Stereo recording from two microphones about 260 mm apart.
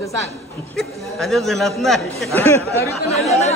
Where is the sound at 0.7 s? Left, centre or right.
Centre.